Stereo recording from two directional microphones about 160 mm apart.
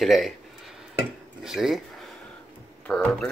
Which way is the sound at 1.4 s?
5° right (ahead or behind).